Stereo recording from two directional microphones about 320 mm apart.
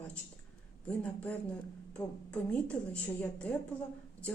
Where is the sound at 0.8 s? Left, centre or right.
Centre.